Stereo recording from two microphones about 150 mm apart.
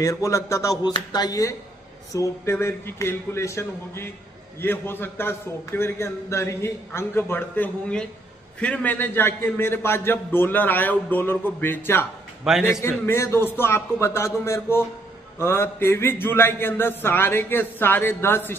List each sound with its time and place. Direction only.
0.0 s a sound: 20° left (ahead or behind)
2.1 s a man's voice: 15° left (ahead or behind)
12.5 s a man's voice: centre (ahead or behind)
12.8 s a man's voice: 15° left (ahead or behind)